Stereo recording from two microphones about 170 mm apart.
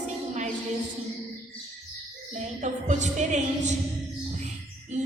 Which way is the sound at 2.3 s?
45° right (ahead or behind).